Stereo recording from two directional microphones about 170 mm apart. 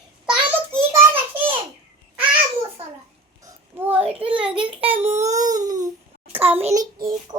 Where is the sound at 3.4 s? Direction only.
15° right (ahead or behind).